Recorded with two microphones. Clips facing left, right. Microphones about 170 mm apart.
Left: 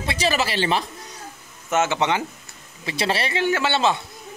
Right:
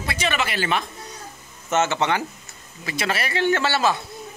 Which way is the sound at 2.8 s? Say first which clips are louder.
Left 2 dB; 30° left (ahead or behind).